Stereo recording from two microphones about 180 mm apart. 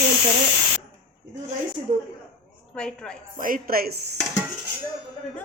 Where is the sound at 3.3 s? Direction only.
50° right (ahead or behind).